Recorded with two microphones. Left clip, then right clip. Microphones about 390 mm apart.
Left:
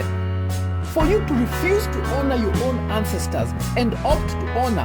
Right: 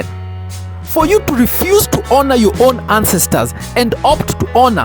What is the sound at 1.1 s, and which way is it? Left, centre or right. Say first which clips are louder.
Speech: right 9 dB; right.